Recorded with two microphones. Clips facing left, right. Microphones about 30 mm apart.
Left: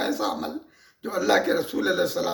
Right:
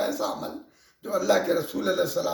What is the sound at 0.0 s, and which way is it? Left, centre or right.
A man's voice, left.